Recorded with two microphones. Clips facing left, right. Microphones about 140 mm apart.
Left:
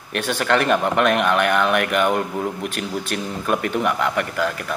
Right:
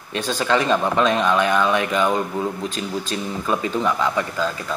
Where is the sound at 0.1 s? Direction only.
65° left (ahead or behind).